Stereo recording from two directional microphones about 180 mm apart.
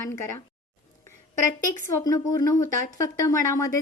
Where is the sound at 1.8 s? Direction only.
15° left (ahead or behind).